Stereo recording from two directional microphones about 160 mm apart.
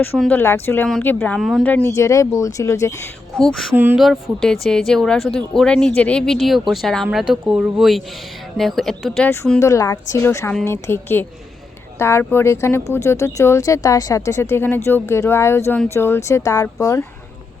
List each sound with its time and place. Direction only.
0.2 s speech: 10° left (ahead or behind)
1.4 s speech: centre (ahead or behind)
1.6 s speech: 10° left (ahead or behind)
3.3 s speech: centre (ahead or behind)
3.8 s speech: 10° right (ahead or behind)
4.0 s speech: centre (ahead or behind)
9.6 s speech: 20° left (ahead or behind)